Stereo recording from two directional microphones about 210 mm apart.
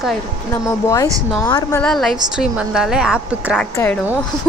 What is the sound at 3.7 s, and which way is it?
Speech, 10° left (ahead or behind).